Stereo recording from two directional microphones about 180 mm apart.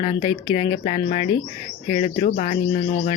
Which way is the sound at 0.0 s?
30° left (ahead or behind).